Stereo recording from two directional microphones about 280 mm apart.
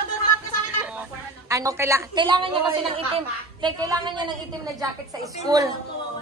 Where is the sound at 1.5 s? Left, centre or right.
Centre.